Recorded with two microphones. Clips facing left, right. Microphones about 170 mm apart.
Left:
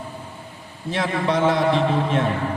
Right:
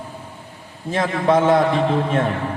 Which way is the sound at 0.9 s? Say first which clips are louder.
Right 4 dB; 50° right (ahead or behind).